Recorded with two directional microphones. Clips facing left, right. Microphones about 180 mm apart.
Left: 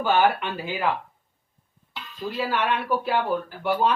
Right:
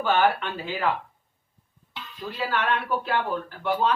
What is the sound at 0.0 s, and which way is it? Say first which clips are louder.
Speech: left 1 dB; 10° left (ahead or behind).